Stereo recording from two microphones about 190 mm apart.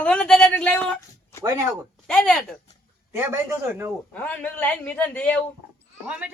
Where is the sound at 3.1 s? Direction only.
10° right (ahead or behind).